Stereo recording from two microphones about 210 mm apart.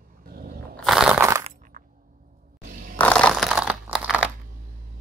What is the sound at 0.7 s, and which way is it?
Crunch, centre (ahead or behind).